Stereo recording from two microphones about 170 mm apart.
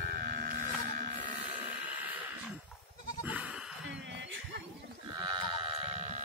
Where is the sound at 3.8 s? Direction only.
90° right.